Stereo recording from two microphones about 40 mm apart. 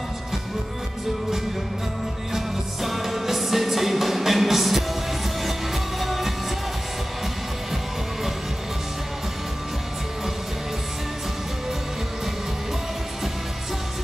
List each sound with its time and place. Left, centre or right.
2.3 s music: centre
5.9 s music: centre